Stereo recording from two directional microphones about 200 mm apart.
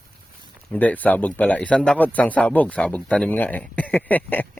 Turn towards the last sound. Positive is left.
turn(degrees=10)  # may be behind; listen again after turning